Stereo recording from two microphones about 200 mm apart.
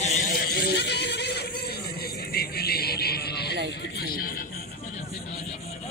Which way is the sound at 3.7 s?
60° left (ahead or behind).